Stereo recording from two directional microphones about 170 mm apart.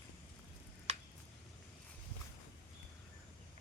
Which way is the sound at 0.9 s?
40° right (ahead or behind).